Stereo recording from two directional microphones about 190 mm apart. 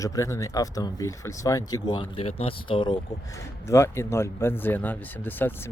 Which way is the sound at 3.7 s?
15° left (ahead or behind).